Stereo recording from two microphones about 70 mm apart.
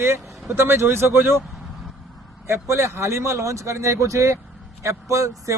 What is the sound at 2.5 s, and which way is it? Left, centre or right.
Speech, right.